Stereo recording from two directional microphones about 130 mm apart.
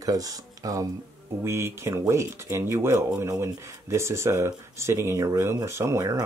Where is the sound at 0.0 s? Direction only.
25° right (ahead or behind).